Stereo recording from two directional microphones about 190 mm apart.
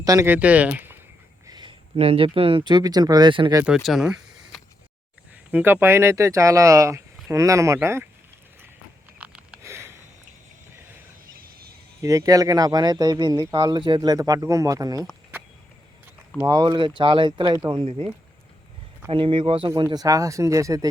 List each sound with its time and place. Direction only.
0.0 s speech: 15° right (ahead or behind)
1.5 s speech: 25° right (ahead or behind)
3.6 s speech: 5° right (ahead or behind)
9.1 s a sound: 5° right (ahead or behind)
11.3 s a sound: 50° right (ahead or behind)
12.0 s speech: 15° right (ahead or behind)
16.5 s speech: 25° right (ahead or behind)
19.1 s speech: 25° right (ahead or behind)